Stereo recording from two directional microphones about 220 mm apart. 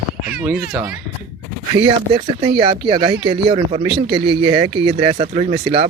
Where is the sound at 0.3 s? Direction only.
5° right (ahead or behind).